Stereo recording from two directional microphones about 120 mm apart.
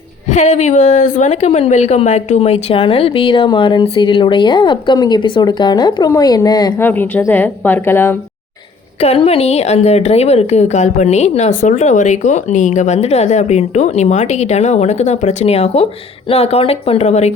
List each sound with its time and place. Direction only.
0.3 s a woman's voice: 75° left (ahead or behind); by 6.7 s 30° left (ahead or behind)
6.7 s a woman's voice: 15° left (ahead or behind)
9.0 s a woman's voice: 55° left (ahead or behind)